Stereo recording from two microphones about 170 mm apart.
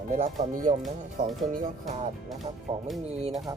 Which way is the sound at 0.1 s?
45° right (ahead or behind).